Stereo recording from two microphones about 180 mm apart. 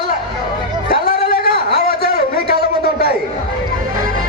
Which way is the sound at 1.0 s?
55° left (ahead or behind).